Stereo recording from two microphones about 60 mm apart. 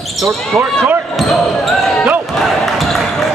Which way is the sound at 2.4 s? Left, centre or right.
Centre.